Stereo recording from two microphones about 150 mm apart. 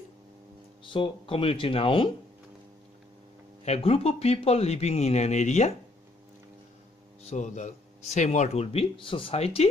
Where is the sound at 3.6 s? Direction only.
40° left (ahead or behind).